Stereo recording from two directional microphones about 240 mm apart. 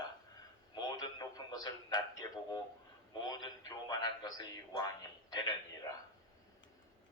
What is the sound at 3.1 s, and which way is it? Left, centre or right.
A man's voice, centre.